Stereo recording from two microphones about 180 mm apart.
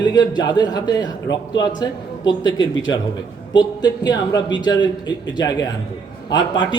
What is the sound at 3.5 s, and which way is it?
A man's voice, 25° left (ahead or behind).